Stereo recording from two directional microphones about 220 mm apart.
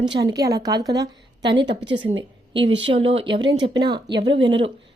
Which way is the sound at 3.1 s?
25° right (ahead or behind).